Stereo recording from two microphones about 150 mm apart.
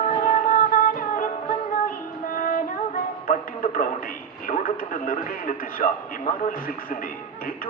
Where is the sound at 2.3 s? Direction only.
65° left (ahead or behind).